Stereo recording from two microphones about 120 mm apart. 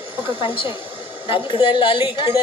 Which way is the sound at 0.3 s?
45° left (ahead or behind).